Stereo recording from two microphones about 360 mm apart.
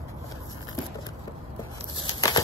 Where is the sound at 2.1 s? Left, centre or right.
Centre.